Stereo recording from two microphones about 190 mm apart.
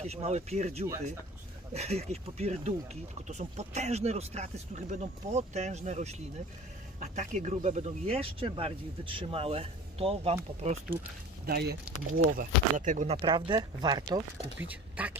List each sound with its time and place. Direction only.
0.0 s speech: 35° right (ahead or behind)
11.4 s speech: 55° right (ahead or behind)
12.4 s speech: 45° right (ahead or behind); by 14.2 s 20° right (ahead or behind)
14.7 s speech: 10° right (ahead or behind)